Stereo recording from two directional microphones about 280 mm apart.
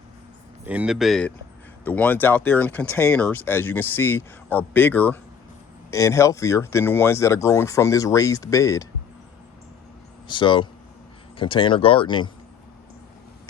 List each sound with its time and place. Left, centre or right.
0.6 s speech: centre
10.2 s speech: centre